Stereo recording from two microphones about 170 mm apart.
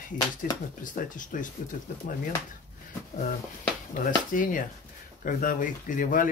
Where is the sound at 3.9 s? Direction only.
50° left (ahead or behind).